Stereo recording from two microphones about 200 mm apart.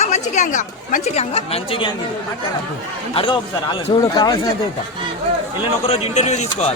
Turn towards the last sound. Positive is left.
turn(degrees=35)  # may be behind; listen again after turning